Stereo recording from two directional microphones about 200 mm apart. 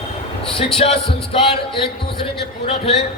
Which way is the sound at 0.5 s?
30° left (ahead or behind).